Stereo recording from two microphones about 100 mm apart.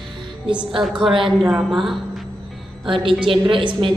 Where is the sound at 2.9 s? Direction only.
60° right (ahead or behind).